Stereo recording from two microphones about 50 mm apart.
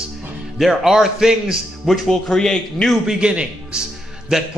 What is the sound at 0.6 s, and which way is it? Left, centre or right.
A man's voice, centre.